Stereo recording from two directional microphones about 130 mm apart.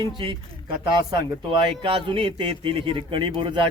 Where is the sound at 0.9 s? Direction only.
40° right (ahead or behind).